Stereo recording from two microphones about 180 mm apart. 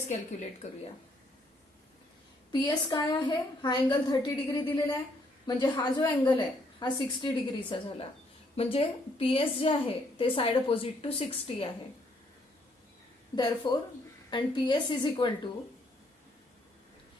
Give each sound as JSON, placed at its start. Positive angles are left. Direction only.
{"t": 2.5, "sound": "a woman's voice", "side_deg": 25}
{"t": 13.3, "sound": "a woman's voice", "side_deg": 25}